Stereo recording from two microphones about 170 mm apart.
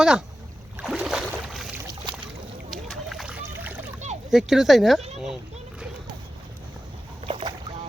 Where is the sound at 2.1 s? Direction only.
30° right (ahead or behind).